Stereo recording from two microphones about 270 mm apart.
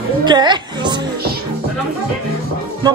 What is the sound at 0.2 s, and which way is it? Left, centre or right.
Music, centre.